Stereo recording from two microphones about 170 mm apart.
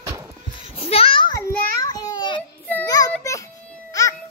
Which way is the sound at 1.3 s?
20° left (ahead or behind).